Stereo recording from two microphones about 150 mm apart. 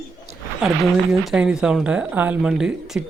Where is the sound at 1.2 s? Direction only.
5° right (ahead or behind).